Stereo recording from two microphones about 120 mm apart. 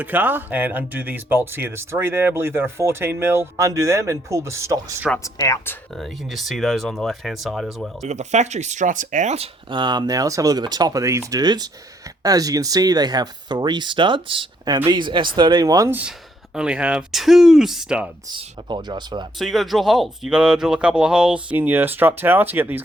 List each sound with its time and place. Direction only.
0.0 s speech: 15° right (ahead or behind)
5.2 s speech: 25° left (ahead or behind)
6.0 s speech: centre (ahead or behind)
8.0 s speech: 75° right (ahead or behind)
9.6 s speech: 40° right (ahead or behind)
15.9 s speech: 15° right (ahead or behind)
18.3 s speech: 40° right (ahead or behind)
19.4 s speech: centre (ahead or behind); by 22.8 s 15° right (ahead or behind)